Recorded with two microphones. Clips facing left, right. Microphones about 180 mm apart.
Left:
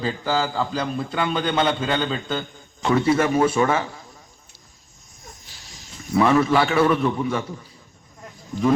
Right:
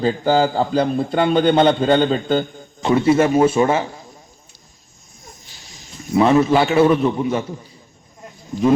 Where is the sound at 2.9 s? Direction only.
25° right (ahead or behind).